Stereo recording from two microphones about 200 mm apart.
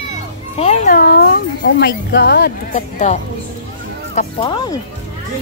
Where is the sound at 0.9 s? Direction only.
45° left (ahead or behind).